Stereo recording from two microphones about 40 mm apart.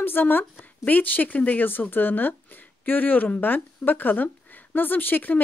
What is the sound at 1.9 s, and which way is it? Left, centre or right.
Speech, left.